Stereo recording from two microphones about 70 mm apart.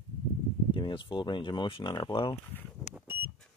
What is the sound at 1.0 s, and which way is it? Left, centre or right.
Speech, left.